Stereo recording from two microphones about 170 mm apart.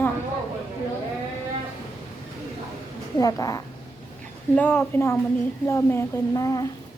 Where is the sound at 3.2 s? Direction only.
20° left (ahead or behind).